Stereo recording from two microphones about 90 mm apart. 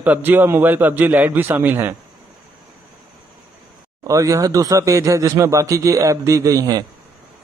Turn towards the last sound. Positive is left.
turn(degrees=-45)  # may be behind; listen again after turning